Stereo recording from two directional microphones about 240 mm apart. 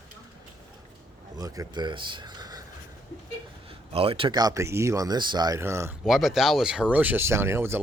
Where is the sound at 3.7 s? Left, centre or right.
Right.